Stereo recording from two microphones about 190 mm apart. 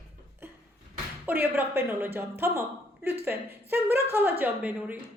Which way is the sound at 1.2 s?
10° right (ahead or behind).